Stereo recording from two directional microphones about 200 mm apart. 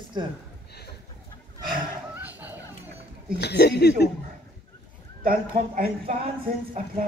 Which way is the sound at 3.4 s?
55° left (ahead or behind).